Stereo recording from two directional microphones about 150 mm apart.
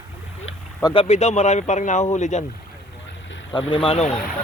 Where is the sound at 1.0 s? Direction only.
50° left (ahead or behind).